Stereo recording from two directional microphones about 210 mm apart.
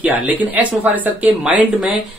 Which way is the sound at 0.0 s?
5° right (ahead or behind).